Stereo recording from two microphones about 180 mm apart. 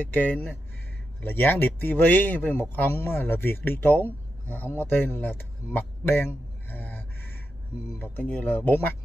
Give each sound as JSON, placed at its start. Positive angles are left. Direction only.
{"t": 0.0, "sound": "speech", "side_deg": 10}